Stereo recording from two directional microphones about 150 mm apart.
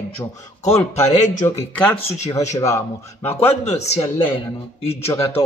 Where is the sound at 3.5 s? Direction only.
50° left (ahead or behind).